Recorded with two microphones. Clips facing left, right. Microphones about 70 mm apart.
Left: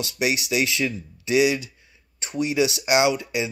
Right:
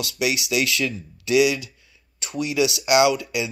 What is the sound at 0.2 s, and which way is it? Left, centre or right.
Speech, left.